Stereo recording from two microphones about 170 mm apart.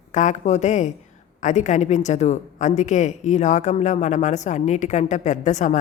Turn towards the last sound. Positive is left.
turn(degrees=45)  # may be behind; listen again after turning